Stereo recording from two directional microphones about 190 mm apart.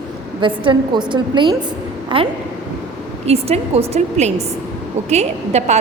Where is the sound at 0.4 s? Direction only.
25° right (ahead or behind).